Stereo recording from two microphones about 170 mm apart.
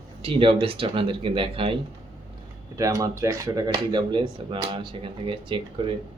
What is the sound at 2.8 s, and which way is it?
Speech, 20° right (ahead or behind).